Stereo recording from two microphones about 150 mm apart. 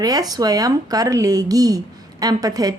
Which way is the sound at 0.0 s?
25° right (ahead or behind).